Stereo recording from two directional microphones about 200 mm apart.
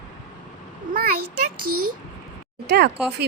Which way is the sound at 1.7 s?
90° right.